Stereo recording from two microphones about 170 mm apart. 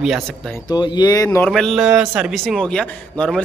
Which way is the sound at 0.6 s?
25° left (ahead or behind).